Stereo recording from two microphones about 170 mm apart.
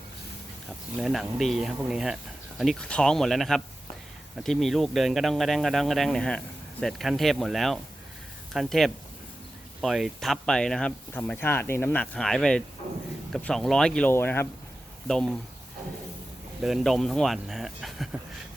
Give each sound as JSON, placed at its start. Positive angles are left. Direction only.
{"t": 0.9, "sound": "speech", "side_deg": 0}
{"t": 16.6, "sound": "speech", "side_deg": 0}